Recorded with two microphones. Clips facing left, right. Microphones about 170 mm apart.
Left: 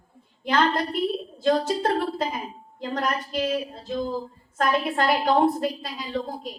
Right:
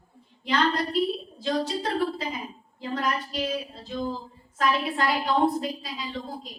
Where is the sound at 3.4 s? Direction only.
50° left (ahead or behind).